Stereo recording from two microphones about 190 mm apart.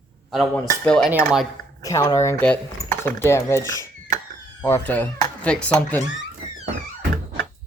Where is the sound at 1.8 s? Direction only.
20° left (ahead or behind).